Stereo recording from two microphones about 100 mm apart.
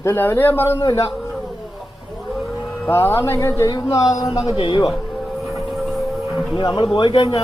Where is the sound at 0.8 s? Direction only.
35° left (ahead or behind).